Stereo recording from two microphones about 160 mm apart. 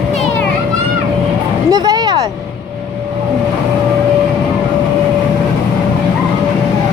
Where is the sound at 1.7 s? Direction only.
25° right (ahead or behind).